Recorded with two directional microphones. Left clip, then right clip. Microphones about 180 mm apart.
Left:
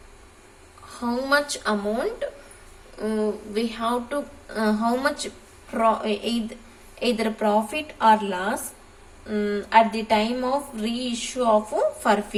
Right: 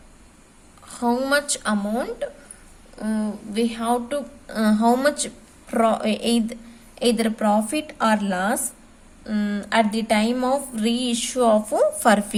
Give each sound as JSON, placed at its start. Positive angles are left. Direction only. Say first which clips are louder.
{"t": 0.9, "sound": "a woman's voice", "louder": "right 2 dB", "side_deg": -55}